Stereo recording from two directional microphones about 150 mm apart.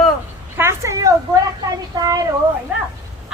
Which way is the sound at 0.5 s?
20° right (ahead or behind).